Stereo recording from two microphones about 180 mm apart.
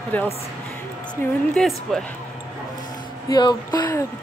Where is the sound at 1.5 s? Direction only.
Centre (ahead or behind).